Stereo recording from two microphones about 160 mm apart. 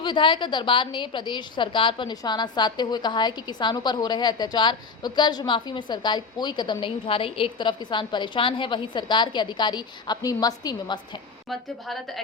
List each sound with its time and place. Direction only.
0.0 s a woman's voice: 30° left (ahead or behind)
11.4 s a woman's voice: centre (ahead or behind)